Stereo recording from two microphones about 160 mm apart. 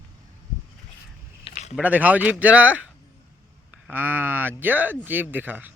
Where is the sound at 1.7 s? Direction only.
10° right (ahead or behind).